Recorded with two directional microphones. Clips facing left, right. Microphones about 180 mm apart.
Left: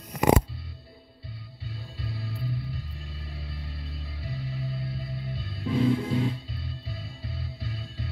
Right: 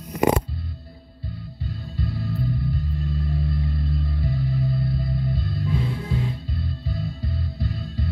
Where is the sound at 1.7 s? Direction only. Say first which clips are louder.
Right 8 dB; 45° right (ahead or behind).